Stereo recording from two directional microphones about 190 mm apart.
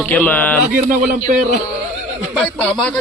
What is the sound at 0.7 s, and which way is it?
Speech, 40° right (ahead or behind).